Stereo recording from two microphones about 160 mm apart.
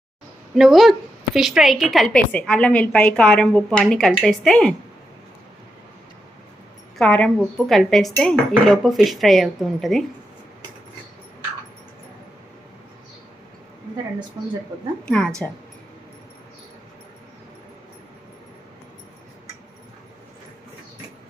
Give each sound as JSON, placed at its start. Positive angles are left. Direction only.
{"t": 0.5, "sound": "a woman's voice", "side_deg": 0}
{"t": 7.0, "sound": "a woman's voice", "side_deg": 5}
{"t": 14.4, "sound": "speech", "side_deg": -25}
{"t": 15.0, "sound": "speech", "side_deg": 5}